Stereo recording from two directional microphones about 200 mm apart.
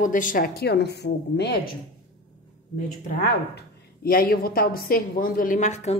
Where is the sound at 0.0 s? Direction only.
40° left (ahead or behind).